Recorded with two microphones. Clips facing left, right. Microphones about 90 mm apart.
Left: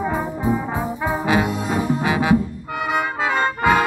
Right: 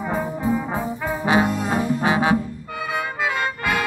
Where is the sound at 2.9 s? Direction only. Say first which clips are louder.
Left 3 dB; 30° left (ahead or behind).